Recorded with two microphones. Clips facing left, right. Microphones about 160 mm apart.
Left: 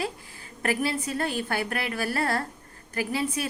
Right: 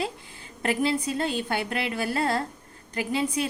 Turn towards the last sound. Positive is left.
turn(degrees=-20)  # may be behind; listen again after turning